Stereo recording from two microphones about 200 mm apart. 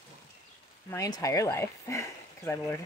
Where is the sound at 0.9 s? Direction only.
15° left (ahead or behind).